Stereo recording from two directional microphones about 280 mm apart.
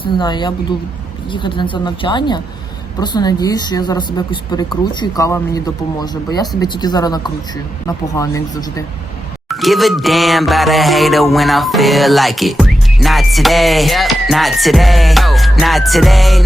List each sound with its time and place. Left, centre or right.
0.0 s speech: centre
9.5 s music: centre